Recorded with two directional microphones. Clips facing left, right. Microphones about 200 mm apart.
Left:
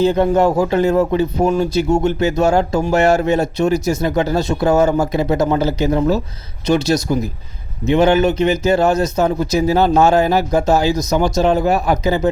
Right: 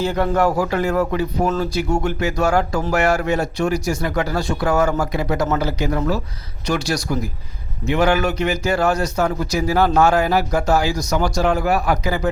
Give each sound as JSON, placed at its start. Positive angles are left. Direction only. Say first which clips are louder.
{"t": 0.0, "sound": "a man's voice", "louder": "left 5 dB", "side_deg": 20}